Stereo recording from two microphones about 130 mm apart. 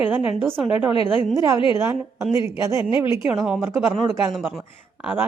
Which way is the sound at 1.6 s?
40° left (ahead or behind).